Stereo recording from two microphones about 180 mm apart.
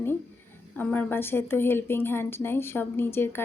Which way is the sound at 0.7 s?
10° left (ahead or behind).